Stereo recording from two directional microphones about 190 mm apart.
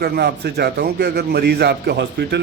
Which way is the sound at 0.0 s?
60° right (ahead or behind).